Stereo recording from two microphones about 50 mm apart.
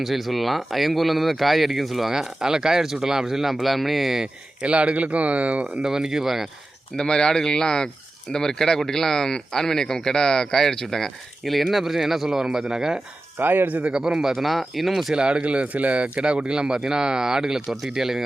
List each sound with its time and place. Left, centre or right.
0.0 s speech: centre
4.6 s speech: right
5.8 s speech: centre
6.9 s speech: centre
13.4 s speech: right
13.8 s speech: centre
14.3 s speech: centre
15.1 s speech: centre